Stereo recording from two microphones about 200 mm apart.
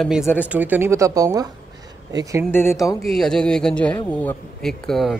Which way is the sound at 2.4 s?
10° left (ahead or behind).